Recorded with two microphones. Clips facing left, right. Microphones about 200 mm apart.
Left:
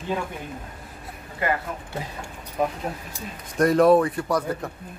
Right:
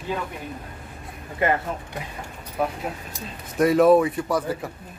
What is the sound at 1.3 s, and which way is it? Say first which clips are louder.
Speech: right 3 dB; 25° right (ahead or behind).